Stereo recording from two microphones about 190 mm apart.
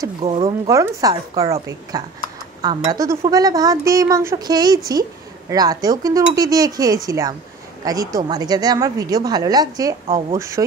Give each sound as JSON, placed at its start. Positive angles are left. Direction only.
{"t": 0.2, "sound": "speech", "side_deg": -30}
{"t": 0.7, "sound": "a woman's voice", "side_deg": -15}